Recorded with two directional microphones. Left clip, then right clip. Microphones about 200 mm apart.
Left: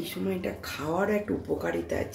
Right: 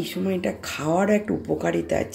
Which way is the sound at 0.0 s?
25° right (ahead or behind).